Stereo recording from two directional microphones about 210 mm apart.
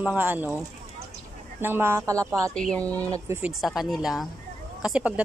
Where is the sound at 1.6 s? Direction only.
10° right (ahead or behind).